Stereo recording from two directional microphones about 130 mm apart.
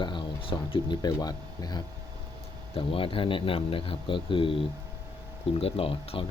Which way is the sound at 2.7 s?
45° left (ahead or behind).